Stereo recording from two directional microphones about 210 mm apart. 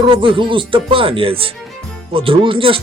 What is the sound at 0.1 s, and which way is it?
Speech, 25° right (ahead or behind).